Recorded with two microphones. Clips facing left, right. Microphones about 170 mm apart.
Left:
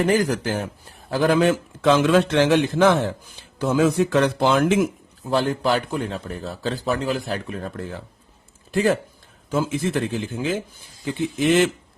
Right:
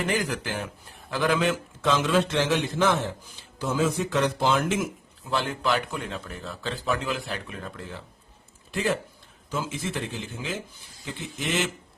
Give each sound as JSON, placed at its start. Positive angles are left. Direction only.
{"t": 0.0, "sound": "a man's voice", "side_deg": 40}
{"t": 1.8, "sound": "a man's voice", "side_deg": 65}
{"t": 5.3, "sound": "a man's voice", "side_deg": 40}
{"t": 8.7, "sound": "a man's voice", "side_deg": 50}